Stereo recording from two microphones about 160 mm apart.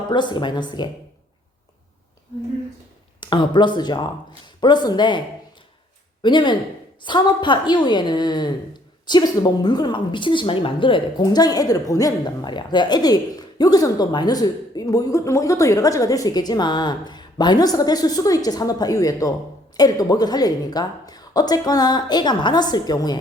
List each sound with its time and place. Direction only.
0.1 s a woman's voice: 30° left (ahead or behind)
3.2 s a woman's voice: 30° left (ahead or behind)
6.2 s a woman's voice: 30° left (ahead or behind)